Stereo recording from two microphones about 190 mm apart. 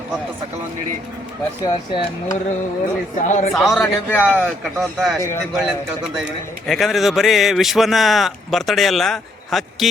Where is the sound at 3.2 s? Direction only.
40° left (ahead or behind).